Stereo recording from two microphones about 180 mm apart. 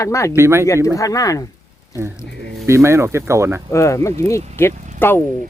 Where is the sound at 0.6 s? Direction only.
15° left (ahead or behind).